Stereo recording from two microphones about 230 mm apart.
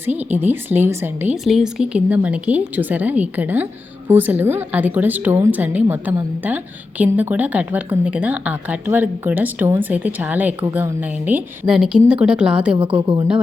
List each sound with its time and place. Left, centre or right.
0.0 s a woman's voice: centre
12.7 s a woman's voice: right